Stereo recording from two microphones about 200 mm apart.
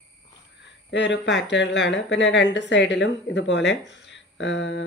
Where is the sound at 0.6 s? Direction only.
65° left (ahead or behind).